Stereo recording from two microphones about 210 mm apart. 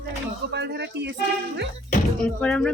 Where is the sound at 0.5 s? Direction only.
55° right (ahead or behind).